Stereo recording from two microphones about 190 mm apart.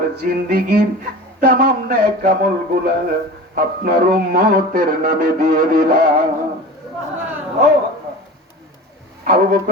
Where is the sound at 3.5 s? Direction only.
50° right (ahead or behind).